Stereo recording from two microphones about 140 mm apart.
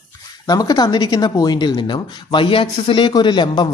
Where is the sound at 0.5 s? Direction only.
25° left (ahead or behind).